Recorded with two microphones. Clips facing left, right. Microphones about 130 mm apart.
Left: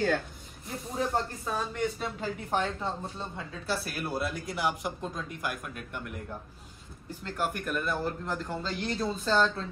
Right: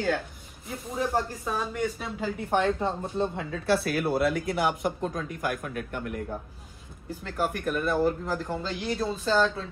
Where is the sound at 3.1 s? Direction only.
60° right (ahead or behind).